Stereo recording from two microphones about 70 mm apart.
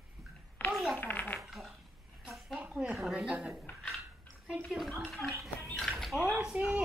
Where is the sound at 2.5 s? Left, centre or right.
Centre.